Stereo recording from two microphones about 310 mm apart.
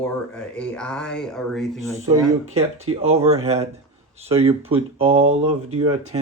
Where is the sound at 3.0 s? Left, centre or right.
Centre.